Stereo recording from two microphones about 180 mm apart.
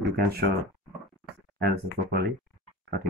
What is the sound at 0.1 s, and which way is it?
Speech, 60° right (ahead or behind).